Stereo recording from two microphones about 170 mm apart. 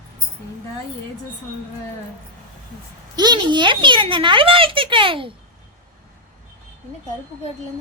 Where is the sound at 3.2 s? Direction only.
25° right (ahead or behind).